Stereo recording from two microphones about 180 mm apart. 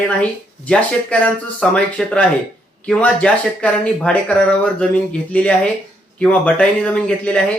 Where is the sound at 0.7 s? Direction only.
10° left (ahead or behind).